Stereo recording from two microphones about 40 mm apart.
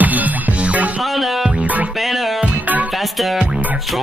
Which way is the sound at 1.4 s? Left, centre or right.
Right.